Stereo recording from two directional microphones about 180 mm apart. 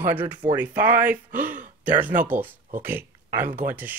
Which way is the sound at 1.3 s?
45° right (ahead or behind).